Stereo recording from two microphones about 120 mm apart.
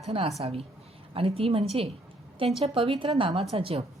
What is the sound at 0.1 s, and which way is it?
Speech, 55° right (ahead or behind).